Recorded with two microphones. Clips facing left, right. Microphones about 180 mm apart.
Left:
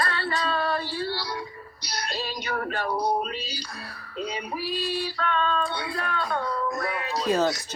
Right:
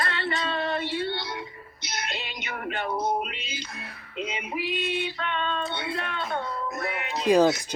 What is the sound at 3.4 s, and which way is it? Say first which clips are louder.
Music: left 1 dB; 20° right (ahead or behind).